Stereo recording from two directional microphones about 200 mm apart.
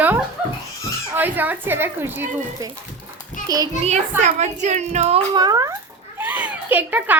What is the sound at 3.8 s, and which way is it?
A child's voice, 35° right (ahead or behind).